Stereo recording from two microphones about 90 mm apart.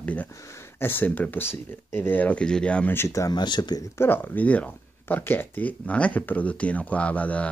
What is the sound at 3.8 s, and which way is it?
Speech, 25° left (ahead or behind).